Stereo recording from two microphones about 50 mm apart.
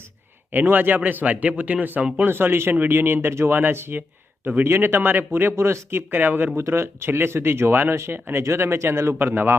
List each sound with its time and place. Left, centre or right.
0.5 s a man's voice: right
2.1 s speech: right
6.6 s speech: right
9.2 s speech: right